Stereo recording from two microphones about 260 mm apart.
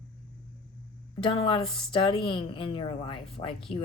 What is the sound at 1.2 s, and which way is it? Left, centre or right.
Speech, left.